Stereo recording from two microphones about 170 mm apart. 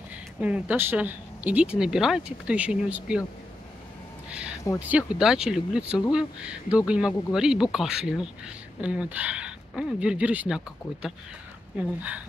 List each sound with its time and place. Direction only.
0.4 s speech: 10° right (ahead or behind)
4.3 s a sound: 5° right (ahead or behind)
4.7 s speech: 10° right (ahead or behind)